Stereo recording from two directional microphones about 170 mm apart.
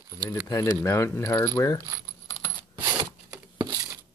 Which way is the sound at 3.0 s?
25° right (ahead or behind).